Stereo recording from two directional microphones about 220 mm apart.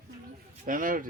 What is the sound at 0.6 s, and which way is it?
Speech, 40° right (ahead or behind).